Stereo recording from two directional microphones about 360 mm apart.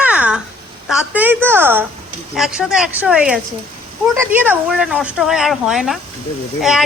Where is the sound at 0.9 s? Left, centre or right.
Centre.